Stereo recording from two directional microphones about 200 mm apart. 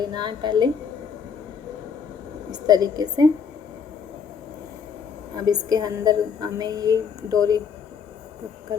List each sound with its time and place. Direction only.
0.0 s a woman's voice: 20° right (ahead or behind)
2.5 s a woman's voice: 20° right (ahead or behind)
5.5 s a woman's voice: 20° right (ahead or behind)